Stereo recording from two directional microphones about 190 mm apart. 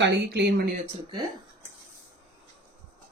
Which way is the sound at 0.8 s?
25° right (ahead or behind).